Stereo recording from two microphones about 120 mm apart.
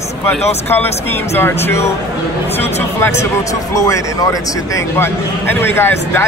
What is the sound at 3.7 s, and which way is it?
A man's voice, 30° left (ahead or behind).